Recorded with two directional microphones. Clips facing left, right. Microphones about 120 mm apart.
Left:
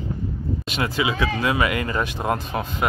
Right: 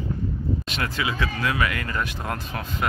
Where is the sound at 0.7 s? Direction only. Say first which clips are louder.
Left 4 dB; 10° left (ahead or behind).